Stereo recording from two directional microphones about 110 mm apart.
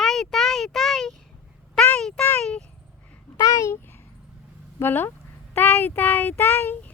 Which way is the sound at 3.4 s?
30° left (ahead or behind).